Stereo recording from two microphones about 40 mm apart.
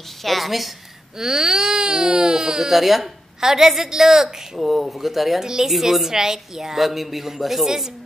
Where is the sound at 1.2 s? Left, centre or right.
Centre.